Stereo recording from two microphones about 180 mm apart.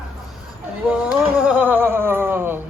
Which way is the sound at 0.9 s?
5° right (ahead or behind).